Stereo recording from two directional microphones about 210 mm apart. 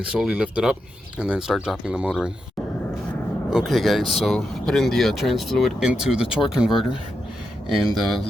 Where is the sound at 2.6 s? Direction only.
Centre (ahead or behind).